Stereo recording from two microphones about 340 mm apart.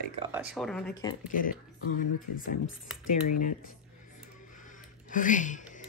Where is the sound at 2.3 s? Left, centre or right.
Left.